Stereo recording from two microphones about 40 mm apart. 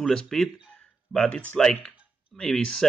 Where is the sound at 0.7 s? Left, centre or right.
Left.